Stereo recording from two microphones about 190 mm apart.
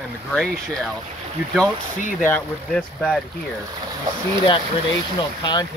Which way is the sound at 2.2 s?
5° left (ahead or behind).